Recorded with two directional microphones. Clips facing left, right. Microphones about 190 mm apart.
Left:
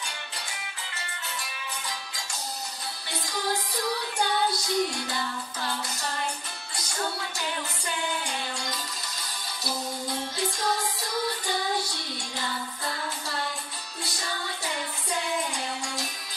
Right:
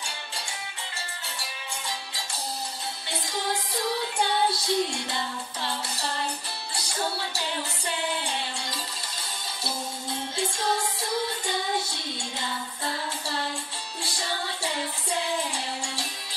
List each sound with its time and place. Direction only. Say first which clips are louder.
1.4 s music: right 1 dB; 30° right (ahead or behind)
4.2 s music: right 1 dB; 25° right (ahead or behind)
10.3 s music: right 3 dB; 25° right (ahead or behind)
14.0 s music: right 2 dB; 30° right (ahead or behind)